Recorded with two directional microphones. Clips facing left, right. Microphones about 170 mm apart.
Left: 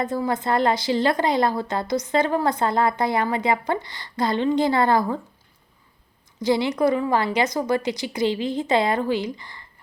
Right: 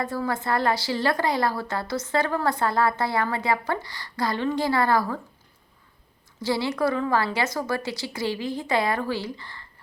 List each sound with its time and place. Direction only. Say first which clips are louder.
0.0 s a woman's voice: left 3 dB; 20° left (ahead or behind)
6.4 s a woman's voice: left 4 dB; 20° left (ahead or behind)